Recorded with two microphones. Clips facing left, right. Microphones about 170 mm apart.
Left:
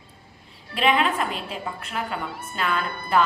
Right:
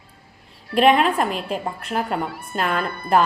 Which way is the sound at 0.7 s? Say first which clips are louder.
Right 6 dB; 50° right (ahead or behind).